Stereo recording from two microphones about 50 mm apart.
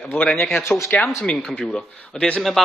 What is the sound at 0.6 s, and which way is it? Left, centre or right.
Speech, left.